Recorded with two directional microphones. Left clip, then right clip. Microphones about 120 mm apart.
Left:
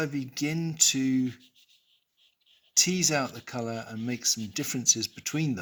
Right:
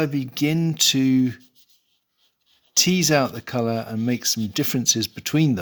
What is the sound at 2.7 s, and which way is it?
Speech, 65° right (ahead or behind).